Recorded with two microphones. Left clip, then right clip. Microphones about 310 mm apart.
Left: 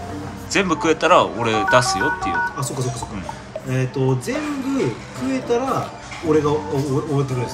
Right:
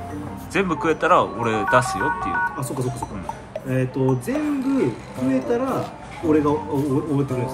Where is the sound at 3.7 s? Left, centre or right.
Centre.